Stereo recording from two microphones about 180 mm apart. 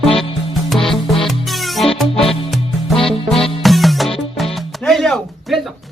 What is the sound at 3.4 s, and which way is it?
Music, centre (ahead or behind).